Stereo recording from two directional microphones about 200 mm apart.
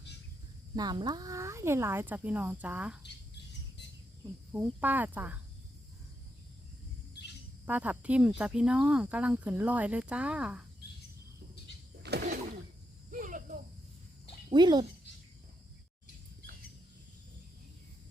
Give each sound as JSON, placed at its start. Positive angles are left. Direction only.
{"t": 0.8, "sound": "speech", "side_deg": -20}
{"t": 4.5, "sound": "speech", "side_deg": -10}
{"t": 7.6, "sound": "speech", "side_deg": -10}
{"t": 12.0, "sound": "a sound", "side_deg": -55}
{"t": 13.1, "sound": "cricket", "side_deg": -40}
{"t": 14.5, "sound": "speech", "side_deg": -20}